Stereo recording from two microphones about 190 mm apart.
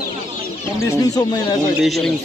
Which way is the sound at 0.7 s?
20° left (ahead or behind).